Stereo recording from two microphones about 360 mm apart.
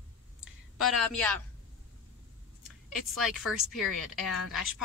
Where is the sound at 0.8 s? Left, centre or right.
Centre.